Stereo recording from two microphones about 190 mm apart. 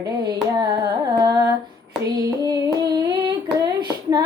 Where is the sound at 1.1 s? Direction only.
20° right (ahead or behind).